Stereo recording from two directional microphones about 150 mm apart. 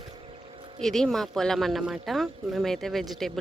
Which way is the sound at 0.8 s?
Centre (ahead or behind).